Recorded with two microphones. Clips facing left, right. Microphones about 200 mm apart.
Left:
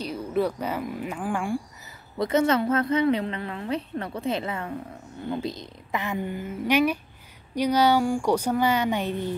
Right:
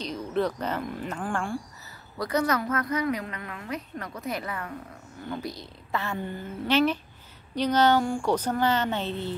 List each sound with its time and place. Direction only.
0.0 s speech: 10° left (ahead or behind)
2.1 s a woman's voice: 25° left (ahead or behind)